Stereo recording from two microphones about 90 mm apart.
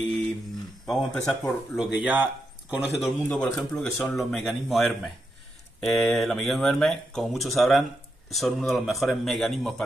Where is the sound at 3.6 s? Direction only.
Centre (ahead or behind).